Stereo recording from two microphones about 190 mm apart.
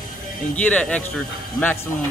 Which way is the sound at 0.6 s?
5° left (ahead or behind).